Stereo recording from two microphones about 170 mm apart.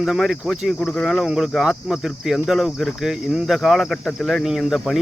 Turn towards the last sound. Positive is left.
turn(degrees=0)  # may be behind; listen again after turning